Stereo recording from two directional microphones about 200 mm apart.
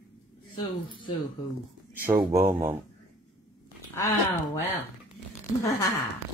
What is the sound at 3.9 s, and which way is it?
Speech, 15° left (ahead or behind).